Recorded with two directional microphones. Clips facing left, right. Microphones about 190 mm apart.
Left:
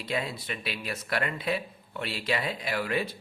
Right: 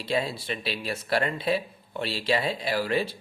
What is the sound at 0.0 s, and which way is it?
Speech, 30° right (ahead or behind).